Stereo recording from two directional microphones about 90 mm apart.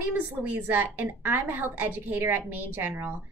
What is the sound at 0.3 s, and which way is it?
A woman's voice, 20° right (ahead or behind).